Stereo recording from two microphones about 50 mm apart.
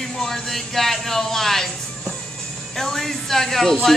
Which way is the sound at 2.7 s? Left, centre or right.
Centre.